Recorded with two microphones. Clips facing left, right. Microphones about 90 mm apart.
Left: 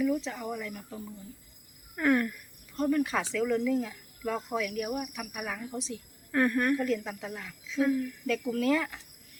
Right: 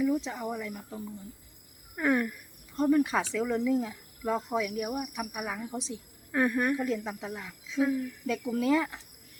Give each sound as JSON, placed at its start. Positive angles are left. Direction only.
{"t": 0.0, "sound": "speech", "side_deg": -20}
{"t": 2.0, "sound": "speech", "side_deg": -10}